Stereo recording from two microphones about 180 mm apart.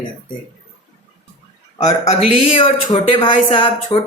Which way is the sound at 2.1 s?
30° left (ahead or behind).